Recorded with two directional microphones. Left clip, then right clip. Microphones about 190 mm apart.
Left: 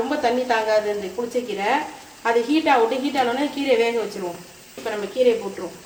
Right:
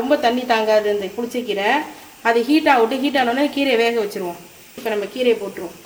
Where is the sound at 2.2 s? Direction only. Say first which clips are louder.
Right 4 dB; 40° right (ahead or behind).